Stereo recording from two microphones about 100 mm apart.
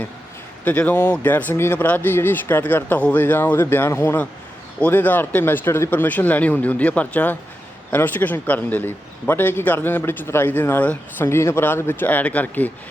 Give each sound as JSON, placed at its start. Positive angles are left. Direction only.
{"t": 0.6, "sound": "a man's voice", "side_deg": 15}